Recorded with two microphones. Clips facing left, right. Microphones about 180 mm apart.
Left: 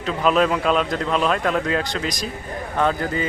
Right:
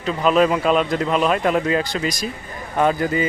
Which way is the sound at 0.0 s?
Centre (ahead or behind).